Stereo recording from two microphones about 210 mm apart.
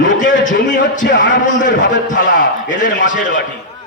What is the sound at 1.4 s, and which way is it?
Speech, 35° left (ahead or behind).